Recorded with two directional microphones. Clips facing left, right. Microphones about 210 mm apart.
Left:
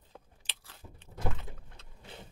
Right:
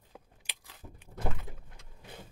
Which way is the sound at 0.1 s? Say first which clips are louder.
Right 1 dB; 10° right (ahead or behind).